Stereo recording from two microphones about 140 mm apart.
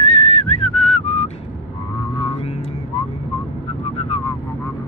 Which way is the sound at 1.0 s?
50° left (ahead or behind).